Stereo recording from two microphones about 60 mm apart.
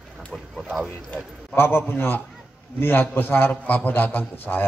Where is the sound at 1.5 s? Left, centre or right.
Left.